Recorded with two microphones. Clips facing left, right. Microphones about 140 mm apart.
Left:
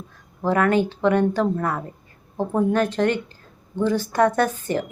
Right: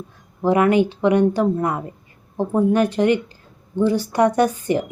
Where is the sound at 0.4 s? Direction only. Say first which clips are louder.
Right 3 dB; 15° right (ahead or behind).